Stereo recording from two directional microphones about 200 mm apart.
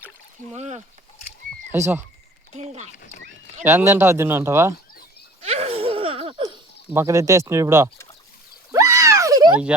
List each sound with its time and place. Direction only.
0.5 s speech: 35° right (ahead or behind)
1.7 s speech: 15° right (ahead or behind)
2.5 s speech: 35° right (ahead or behind)
2.9 s speech: 40° left (ahead or behind)
3.6 s speech: 10° right (ahead or behind)
5.4 s laughter: 30° right (ahead or behind)
6.9 s speech: 15° right (ahead or behind)
8.7 s a sound: 15° right (ahead or behind)